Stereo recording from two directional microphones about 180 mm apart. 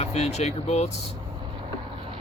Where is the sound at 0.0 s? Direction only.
35° left (ahead or behind).